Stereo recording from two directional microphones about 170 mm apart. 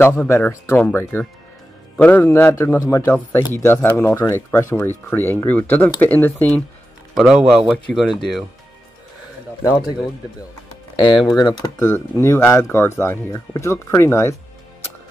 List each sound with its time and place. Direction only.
0.0 s speech: 15° left (ahead or behind)
2.0 s speech: 10° left (ahead or behind)
7.2 s speech: centre (ahead or behind)
9.6 s a man's voice: 20° left (ahead or behind)
10.7 s music: 30° left (ahead or behind)
11.2 s speech: 25° left (ahead or behind)